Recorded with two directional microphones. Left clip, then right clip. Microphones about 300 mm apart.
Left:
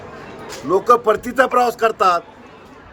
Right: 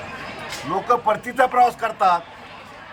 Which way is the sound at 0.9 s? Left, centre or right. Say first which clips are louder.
Left 4 dB; centre.